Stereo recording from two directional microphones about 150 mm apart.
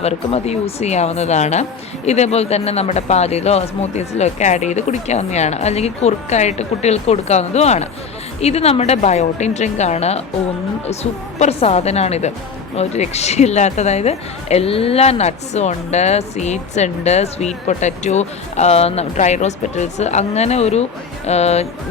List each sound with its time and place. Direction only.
0.0 s a woman's voice: 45° left (ahead or behind)